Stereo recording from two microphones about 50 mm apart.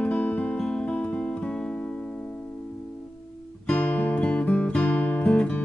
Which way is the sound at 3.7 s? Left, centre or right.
Left.